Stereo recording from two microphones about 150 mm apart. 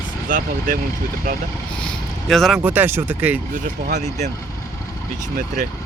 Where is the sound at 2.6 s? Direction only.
10° right (ahead or behind).